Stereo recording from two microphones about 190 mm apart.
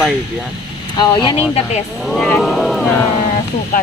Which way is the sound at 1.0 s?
25° left (ahead or behind).